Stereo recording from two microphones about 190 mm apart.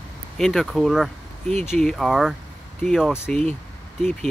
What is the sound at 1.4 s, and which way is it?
Speech, 35° right (ahead or behind).